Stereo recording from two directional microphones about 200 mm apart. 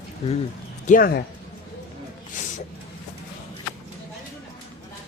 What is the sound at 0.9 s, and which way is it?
Speech, 45° left (ahead or behind).